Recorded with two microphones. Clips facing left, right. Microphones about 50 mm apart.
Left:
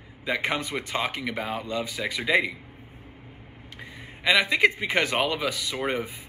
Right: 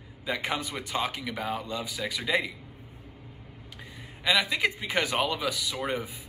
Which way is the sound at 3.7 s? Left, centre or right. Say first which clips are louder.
Left 4 dB; left.